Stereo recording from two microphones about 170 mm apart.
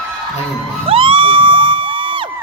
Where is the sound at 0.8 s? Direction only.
30° right (ahead or behind).